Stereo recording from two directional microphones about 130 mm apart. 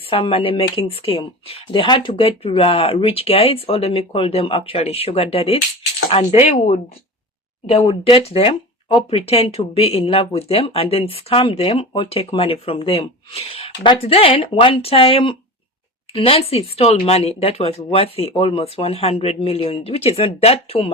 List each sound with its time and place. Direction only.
0.1 s speech: 45° left (ahead or behind)
7.7 s speech: 50° left (ahead or behind)